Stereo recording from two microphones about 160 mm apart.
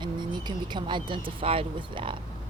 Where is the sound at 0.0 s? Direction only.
30° right (ahead or behind).